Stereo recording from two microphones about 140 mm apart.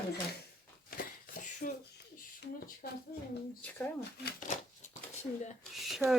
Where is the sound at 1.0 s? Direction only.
90° left.